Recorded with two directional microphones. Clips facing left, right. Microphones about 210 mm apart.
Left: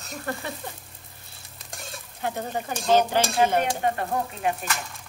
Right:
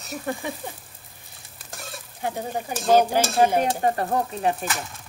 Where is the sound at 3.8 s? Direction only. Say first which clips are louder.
Right 3 dB; 35° right (ahead or behind).